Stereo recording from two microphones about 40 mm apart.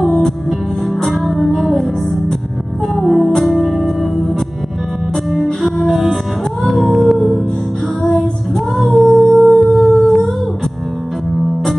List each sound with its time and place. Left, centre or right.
0.0 s music: centre
3.0 s music: centre
5.6 s music: centre
8.7 s humming: centre
11.3 s music: centre